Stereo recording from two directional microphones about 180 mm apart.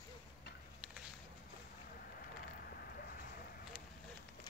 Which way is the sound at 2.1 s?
55° left (ahead or behind).